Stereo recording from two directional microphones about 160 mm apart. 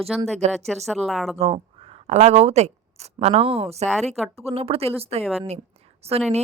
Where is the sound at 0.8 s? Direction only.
Centre (ahead or behind).